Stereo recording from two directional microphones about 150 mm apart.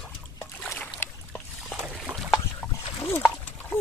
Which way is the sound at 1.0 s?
15° left (ahead or behind).